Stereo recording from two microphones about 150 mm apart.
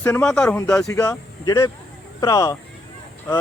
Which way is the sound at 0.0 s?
10° left (ahead or behind).